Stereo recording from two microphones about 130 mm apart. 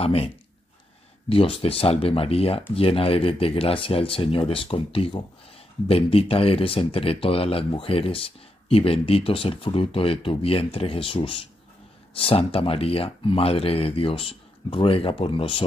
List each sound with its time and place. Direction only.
0.0 s speech: 50° left (ahead or behind)
1.3 s speech: 45° left (ahead or behind)